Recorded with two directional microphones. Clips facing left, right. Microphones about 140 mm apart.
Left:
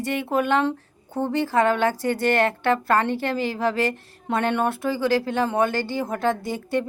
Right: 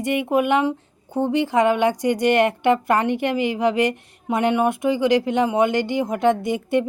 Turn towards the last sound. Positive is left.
turn(degrees=-20)  # may be behind; listen again after turning